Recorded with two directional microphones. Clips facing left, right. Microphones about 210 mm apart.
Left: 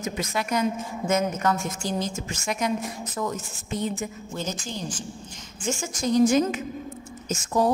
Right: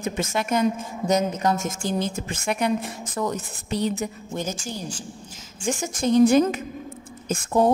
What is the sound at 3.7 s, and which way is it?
Speech, 75° right (ahead or behind).